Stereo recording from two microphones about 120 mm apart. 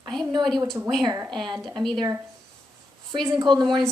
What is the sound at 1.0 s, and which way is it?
Speech, 25° right (ahead or behind).